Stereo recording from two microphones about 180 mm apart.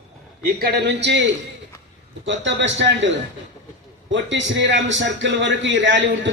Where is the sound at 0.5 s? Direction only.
65° right (ahead or behind).